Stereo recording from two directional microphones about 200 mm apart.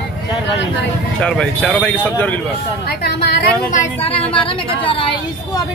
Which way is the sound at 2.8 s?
50° left (ahead or behind).